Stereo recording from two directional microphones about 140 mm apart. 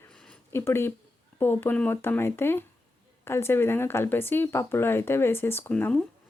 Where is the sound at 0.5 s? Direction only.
20° left (ahead or behind).